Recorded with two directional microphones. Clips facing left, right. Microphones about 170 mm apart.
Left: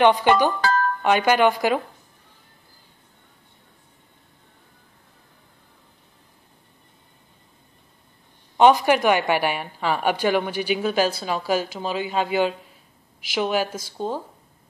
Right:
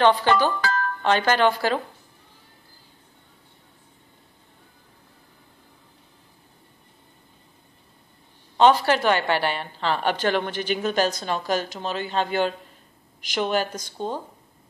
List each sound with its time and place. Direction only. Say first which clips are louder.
0.0 s a woman's voice: left 2 dB; 15° left (ahead or behind)
0.6 s music: left 4 dB; 35° left (ahead or behind)
1.0 s a woman's voice: left 1 dB; 10° left (ahead or behind)
8.5 s a woman's voice: left 2 dB; 15° left (ahead or behind)